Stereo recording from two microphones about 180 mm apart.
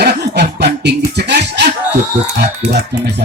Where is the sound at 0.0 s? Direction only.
65° right (ahead or behind).